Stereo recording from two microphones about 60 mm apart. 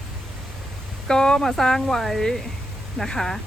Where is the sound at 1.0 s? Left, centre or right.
Centre.